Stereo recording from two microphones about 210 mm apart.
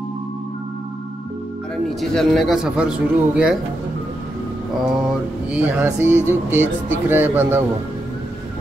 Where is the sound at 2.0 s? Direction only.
Centre (ahead or behind).